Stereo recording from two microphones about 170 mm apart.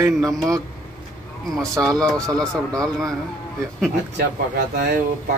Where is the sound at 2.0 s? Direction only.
5° left (ahead or behind).